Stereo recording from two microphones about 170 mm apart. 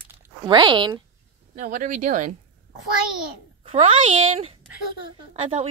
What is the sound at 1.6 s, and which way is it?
Speech, 50° right (ahead or behind).